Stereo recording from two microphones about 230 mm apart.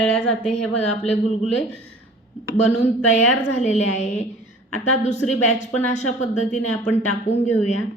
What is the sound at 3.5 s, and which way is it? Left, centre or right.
Speech, left.